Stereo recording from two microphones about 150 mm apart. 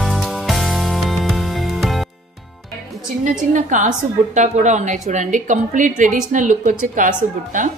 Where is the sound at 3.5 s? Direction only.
55° right (ahead or behind).